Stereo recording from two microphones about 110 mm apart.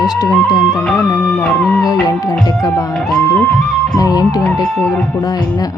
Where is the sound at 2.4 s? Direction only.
30° left (ahead or behind).